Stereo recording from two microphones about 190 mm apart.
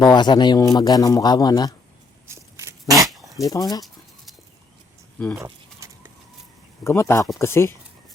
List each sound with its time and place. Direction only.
0.0 s a man's voice: 20° left (ahead or behind)
2.2 s walk: 15° right (ahead or behind)
3.4 s a man's voice: 20° left (ahead or behind)
5.4 s a sound: 15° right (ahead or behind)
6.8 s speech: 15° left (ahead or behind)